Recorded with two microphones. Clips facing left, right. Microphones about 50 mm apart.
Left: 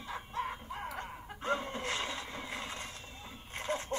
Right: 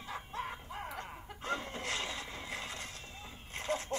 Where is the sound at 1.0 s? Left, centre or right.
Left.